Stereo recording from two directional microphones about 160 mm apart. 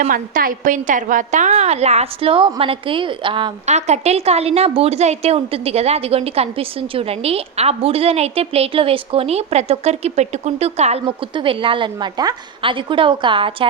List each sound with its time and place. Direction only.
0.0 s a woman's voice: 60° right (ahead or behind); by 3.5 s 30° right (ahead or behind)
3.7 s a woman's voice: 45° right (ahead or behind)
11.0 s a woman's voice: 30° right (ahead or behind)